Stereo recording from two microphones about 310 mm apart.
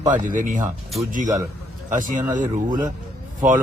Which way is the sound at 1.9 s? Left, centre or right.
Right.